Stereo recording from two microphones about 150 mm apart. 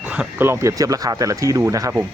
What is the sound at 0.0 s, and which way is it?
Speech, 10° right (ahead or behind).